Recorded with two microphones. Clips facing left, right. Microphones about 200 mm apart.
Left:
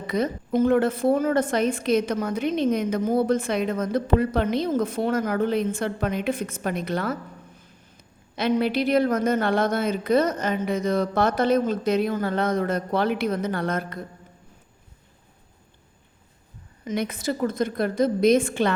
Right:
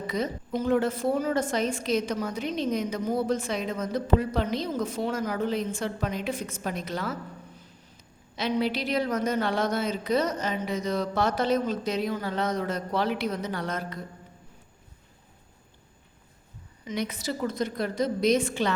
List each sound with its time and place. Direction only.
0.1 s a woman's voice: 55° left (ahead or behind)
8.4 s a woman's voice: 55° left (ahead or behind)
16.8 s a woman's voice: 50° left (ahead or behind)